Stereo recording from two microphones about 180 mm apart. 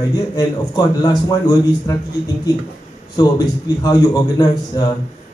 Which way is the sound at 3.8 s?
20° left (ahead or behind).